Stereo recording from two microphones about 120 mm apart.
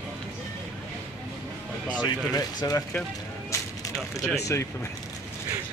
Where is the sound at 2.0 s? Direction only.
35° left (ahead or behind).